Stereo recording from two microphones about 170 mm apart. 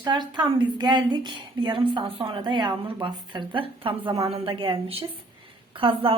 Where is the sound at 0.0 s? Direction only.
25° right (ahead or behind).